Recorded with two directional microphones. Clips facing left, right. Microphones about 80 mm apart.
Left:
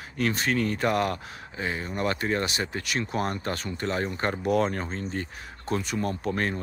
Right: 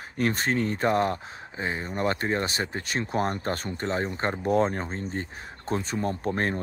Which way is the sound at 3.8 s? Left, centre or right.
Right.